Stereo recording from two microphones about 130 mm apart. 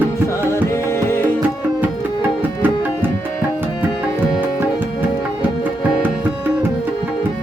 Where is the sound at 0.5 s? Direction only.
20° left (ahead or behind).